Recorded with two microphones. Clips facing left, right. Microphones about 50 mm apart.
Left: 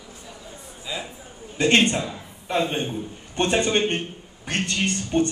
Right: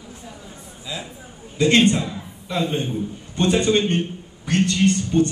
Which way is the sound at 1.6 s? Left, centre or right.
Left.